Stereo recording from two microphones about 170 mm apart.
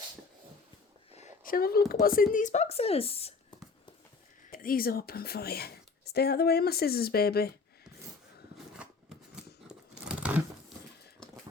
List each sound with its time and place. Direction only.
1.5 s speech: 60° left (ahead or behind); by 3.3 s 35° left (ahead or behind)
4.5 s speech: 60° left (ahead or behind)
8.5 s a sound: 5° right (ahead or behind)